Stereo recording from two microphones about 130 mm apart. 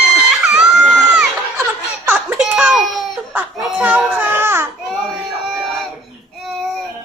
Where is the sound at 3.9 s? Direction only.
15° right (ahead or behind).